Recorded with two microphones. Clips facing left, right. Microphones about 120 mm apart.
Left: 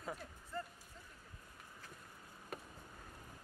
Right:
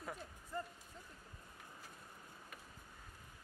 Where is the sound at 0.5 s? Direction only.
15° right (ahead or behind).